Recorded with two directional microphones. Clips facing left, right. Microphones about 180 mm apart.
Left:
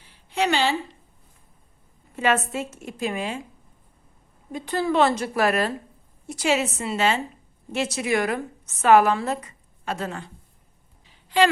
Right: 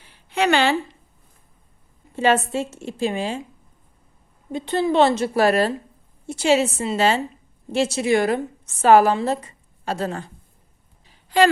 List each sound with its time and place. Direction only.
0.3 s a sound: 60° right (ahead or behind)
2.1 s a woman's voice: 30° right (ahead or behind)
4.5 s a woman's voice: 25° right (ahead or behind)
11.3 s a woman's voice: 45° right (ahead or behind)